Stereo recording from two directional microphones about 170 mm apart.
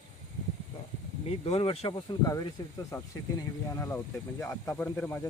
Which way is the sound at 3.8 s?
15° left (ahead or behind).